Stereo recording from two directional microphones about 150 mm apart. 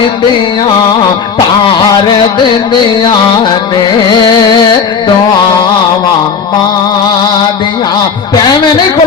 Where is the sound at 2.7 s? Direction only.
30° left (ahead or behind).